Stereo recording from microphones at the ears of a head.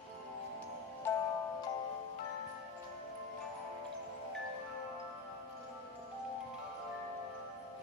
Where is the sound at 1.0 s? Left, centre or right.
Left.